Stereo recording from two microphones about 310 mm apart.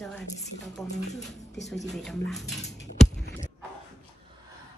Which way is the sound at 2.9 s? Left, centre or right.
Left.